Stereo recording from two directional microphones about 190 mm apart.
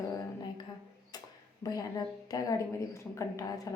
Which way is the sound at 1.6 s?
20° left (ahead or behind).